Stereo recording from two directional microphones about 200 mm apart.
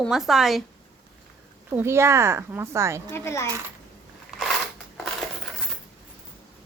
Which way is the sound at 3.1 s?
10° left (ahead or behind).